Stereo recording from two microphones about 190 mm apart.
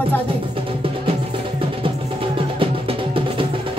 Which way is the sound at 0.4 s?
30° right (ahead or behind).